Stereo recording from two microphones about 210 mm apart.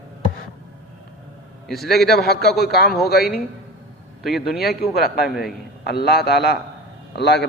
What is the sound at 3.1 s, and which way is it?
Speech, 50° left (ahead or behind).